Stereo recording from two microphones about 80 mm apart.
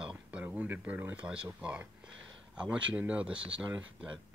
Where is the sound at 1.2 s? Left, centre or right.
Centre.